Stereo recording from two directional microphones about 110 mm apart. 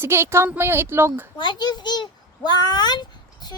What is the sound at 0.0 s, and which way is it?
Speech, 20° right (ahead or behind).